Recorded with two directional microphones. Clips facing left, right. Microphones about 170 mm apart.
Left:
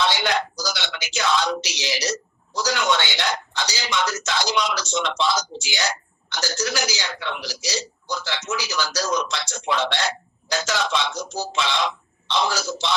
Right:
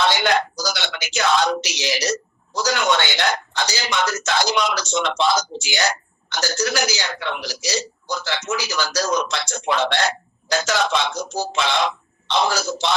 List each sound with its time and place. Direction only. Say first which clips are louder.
0.0 s speech: right 3 dB; 55° right (ahead or behind)